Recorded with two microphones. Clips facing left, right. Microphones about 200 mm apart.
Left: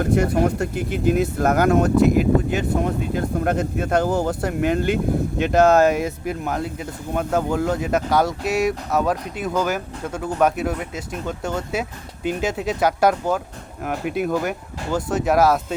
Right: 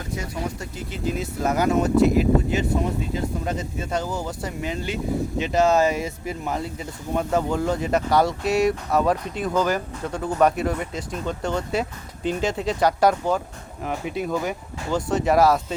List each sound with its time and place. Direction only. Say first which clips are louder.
0.0 s speech: left 11 dB; 60° left (ahead or behind)
5.9 s speech: left 4 dB; centre (ahead or behind)